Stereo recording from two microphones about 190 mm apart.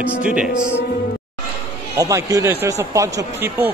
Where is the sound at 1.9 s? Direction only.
15° right (ahead or behind).